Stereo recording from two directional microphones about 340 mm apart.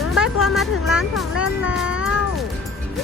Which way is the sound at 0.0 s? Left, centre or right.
Centre.